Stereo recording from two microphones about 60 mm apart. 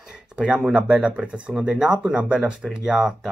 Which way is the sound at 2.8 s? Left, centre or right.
Centre.